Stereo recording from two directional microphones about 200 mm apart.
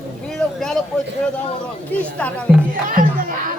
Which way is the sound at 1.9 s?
5° left (ahead or behind).